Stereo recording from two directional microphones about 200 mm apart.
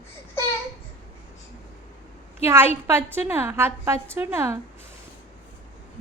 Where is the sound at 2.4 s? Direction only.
10° right (ahead or behind).